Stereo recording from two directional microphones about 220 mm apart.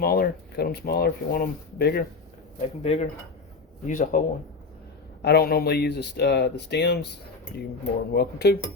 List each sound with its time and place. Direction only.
0.0 s speech: 45° left (ahead or behind)
2.6 s speech: 30° left (ahead or behind)
5.2 s speech: 45° left (ahead or behind)
8.1 s speech: 45° left (ahead or behind)